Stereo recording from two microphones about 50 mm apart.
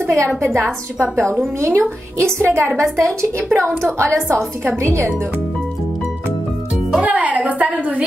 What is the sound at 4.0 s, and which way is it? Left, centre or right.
A woman's voice, right.